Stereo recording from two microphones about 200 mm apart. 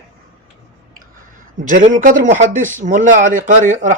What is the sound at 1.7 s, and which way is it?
Speech, 40° right (ahead or behind).